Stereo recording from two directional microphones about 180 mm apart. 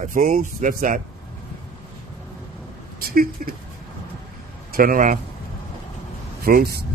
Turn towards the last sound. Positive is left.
turn(degrees=-55)  # may be behind; listen again after turning